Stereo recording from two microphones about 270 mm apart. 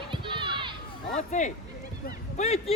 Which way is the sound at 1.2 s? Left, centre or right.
Left.